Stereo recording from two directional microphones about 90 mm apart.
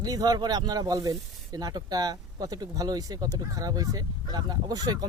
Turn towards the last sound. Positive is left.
turn(degrees=-45)  # may be behind; listen again after turning